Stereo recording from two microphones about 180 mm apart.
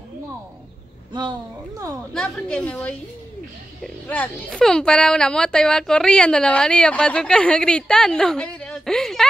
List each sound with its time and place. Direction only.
2.1 s a woman's voice: 5° left (ahead or behind)